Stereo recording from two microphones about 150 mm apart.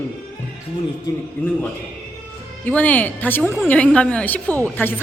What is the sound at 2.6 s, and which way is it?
A woman's voice, 10° left (ahead or behind).